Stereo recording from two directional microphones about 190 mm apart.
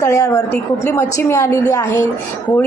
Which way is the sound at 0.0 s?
15° left (ahead or behind).